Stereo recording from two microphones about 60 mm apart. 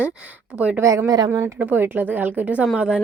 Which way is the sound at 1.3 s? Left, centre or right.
Right.